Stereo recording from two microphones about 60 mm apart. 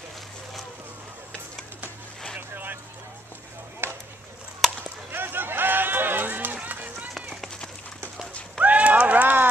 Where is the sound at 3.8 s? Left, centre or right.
Right.